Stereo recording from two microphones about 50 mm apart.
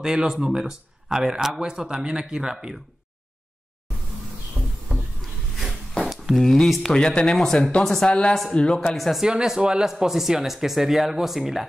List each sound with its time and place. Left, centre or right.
0.0 s speech: centre
5.6 s a sound: centre
6.3 s speech: centre
8.0 s speech: centre
8.9 s speech: centre
9.2 s speech: centre